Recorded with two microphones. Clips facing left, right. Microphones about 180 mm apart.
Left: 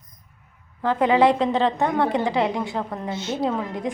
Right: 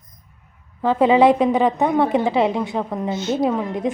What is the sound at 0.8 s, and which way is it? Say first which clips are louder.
A woman's voice: right 4 dB; 20° right (ahead or behind).